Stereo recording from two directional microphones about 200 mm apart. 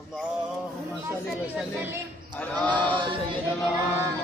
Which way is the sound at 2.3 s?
10° left (ahead or behind).